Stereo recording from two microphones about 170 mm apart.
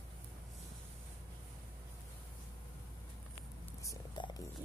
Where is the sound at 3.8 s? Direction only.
25° left (ahead or behind).